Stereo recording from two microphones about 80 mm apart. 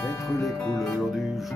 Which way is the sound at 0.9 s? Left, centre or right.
Centre.